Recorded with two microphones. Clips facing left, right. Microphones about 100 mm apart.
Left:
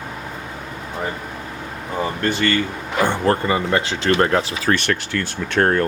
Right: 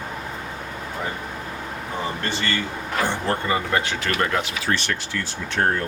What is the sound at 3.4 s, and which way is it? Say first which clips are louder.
Speech: left 3 dB; 30° left (ahead or behind).